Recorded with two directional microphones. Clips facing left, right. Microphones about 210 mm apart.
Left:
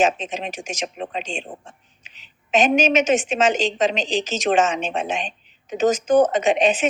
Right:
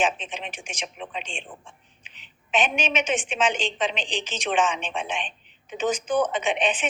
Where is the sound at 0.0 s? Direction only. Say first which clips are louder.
Left 6 dB; 40° left (ahead or behind).